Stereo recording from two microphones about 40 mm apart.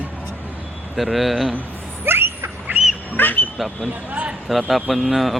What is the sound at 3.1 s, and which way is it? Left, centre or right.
Speech, left.